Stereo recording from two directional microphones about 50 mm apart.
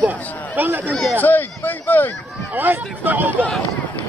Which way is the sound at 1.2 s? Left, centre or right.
Left.